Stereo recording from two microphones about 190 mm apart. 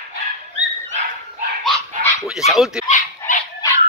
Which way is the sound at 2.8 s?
45° left (ahead or behind).